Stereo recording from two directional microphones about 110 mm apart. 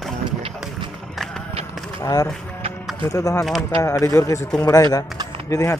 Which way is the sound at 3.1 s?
30° left (ahead or behind).